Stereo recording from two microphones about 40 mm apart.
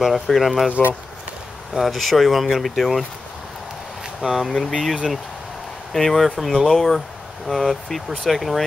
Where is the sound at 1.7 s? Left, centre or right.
Centre.